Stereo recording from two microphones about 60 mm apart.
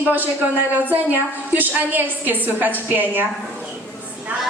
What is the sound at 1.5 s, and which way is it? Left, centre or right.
A woman's voice, right.